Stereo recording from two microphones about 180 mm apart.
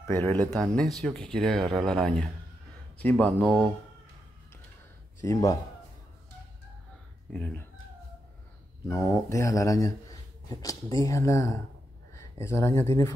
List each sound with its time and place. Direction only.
0.0 s speech: 15° left (ahead or behind)
5.2 s speech: 20° left (ahead or behind)
7.3 s speech: 10° left (ahead or behind)
8.8 s speech: 15° left (ahead or behind)